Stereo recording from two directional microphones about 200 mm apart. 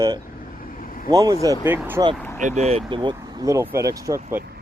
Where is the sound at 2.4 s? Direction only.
35° right (ahead or behind).